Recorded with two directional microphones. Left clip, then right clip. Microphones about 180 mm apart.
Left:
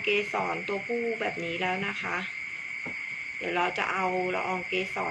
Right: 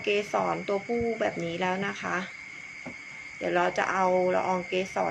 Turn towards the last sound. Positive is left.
turn(degrees=-55)  # may be behind; listen again after turning